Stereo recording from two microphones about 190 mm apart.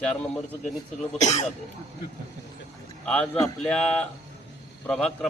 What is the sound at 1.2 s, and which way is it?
Speech, 35° left (ahead or behind).